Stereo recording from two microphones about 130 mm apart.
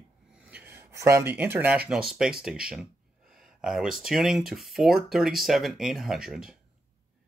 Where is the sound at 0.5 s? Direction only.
15° right (ahead or behind).